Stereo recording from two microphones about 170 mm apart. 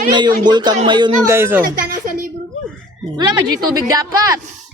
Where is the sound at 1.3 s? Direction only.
15° right (ahead or behind).